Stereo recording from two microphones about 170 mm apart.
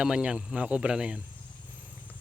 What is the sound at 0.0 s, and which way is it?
Speech, 5° right (ahead or behind).